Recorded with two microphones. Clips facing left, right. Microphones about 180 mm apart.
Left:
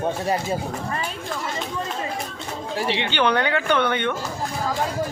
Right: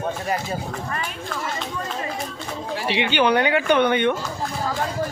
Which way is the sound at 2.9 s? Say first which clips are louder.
Right 3 dB; 15° right (ahead or behind).